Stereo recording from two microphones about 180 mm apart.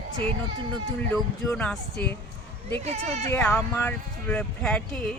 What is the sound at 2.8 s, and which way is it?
Speech, 35° right (ahead or behind).